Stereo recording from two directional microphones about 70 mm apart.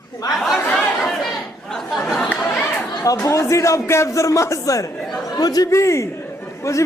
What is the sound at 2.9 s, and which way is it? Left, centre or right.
A man's voice, left.